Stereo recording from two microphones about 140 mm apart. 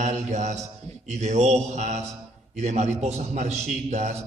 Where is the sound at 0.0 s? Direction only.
55° right (ahead or behind).